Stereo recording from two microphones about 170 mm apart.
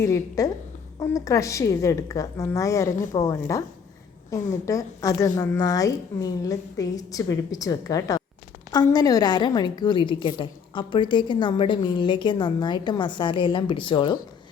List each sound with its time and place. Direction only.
0.0 s a woman's voice: 20° left (ahead or behind)
4.6 s a woman's voice: 20° left (ahead or behind)